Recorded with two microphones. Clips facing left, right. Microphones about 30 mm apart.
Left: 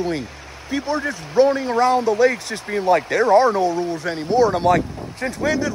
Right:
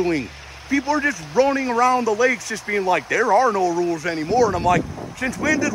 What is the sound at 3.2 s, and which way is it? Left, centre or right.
Speech, left.